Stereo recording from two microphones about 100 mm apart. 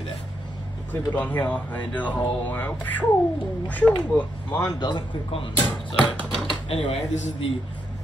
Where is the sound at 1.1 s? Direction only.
15° left (ahead or behind).